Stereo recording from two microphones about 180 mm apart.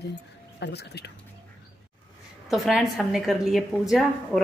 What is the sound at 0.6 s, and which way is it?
Speech, 70° left (ahead or behind).